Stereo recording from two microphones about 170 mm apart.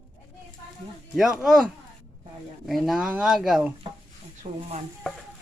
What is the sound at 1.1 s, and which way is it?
Speech, centre (ahead or behind).